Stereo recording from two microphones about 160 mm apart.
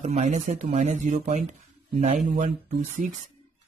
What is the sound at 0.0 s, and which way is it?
Speech, 45° right (ahead or behind).